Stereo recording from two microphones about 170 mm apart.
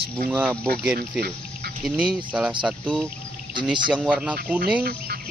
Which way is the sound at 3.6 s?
5° right (ahead or behind).